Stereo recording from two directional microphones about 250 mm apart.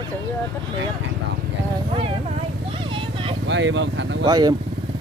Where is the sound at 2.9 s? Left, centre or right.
Centre.